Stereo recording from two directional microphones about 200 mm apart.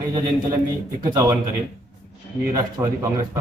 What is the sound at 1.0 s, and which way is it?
Speech, 20° right (ahead or behind).